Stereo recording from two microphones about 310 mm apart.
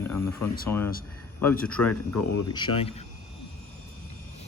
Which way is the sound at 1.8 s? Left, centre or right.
Left.